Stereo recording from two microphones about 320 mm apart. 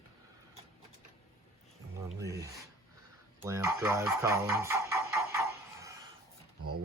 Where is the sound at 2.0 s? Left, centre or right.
Centre.